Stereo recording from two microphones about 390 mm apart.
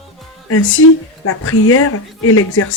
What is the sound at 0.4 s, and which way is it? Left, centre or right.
Speech, left.